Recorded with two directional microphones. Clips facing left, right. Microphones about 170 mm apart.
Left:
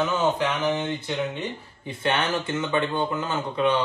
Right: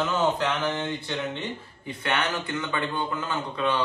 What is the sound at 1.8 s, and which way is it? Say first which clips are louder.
Speech: left 3 dB; 25° left (ahead or behind).